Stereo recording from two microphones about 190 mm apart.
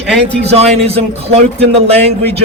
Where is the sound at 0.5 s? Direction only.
30° right (ahead or behind).